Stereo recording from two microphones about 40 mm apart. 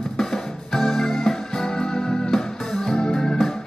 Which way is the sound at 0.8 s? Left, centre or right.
Centre.